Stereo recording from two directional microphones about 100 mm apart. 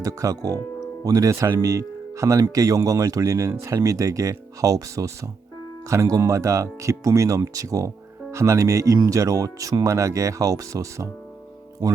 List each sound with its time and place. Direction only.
0.0 s speech: 35° right (ahead or behind)